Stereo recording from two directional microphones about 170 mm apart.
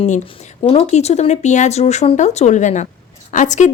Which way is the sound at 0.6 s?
35° left (ahead or behind).